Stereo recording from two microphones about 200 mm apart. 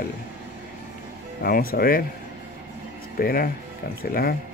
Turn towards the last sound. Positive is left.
turn(degrees=45)  # may be behind; listen again after turning